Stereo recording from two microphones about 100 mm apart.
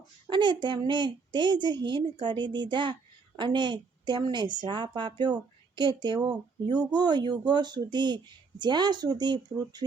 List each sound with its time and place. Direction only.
0.3 s a woman's voice: 50° right (ahead or behind)